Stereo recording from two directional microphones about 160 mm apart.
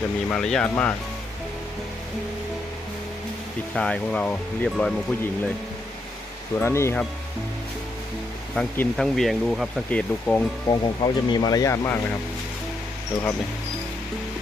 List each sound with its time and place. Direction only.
0.3 s speech: 5° left (ahead or behind)
3.8 s speech: 5° left (ahead or behind)
6.6 s speech: 15° left (ahead or behind)
8.5 s speech: 10° left (ahead or behind)
10.7 s speech: 25° left (ahead or behind)